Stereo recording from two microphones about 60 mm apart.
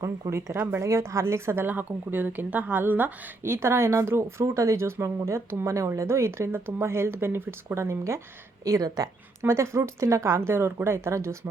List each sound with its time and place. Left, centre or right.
0.0 s speech: right
1.6 s speech: right
3.4 s speech: right
8.6 s speech: right
9.4 s speech: right